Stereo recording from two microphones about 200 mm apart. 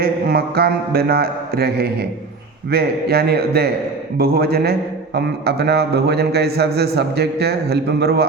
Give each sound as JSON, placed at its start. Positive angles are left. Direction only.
{"t": 0.0, "sound": "a man's voice", "side_deg": -50}